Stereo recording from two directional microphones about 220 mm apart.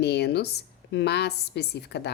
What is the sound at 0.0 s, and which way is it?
A woman's voice, 50° left (ahead or behind).